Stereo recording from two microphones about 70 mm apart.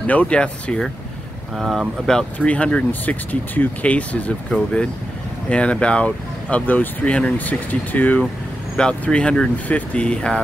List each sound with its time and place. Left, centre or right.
0.0 s speech: left
1.6 s speech: centre
2.3 s speech: centre
5.5 s speech: centre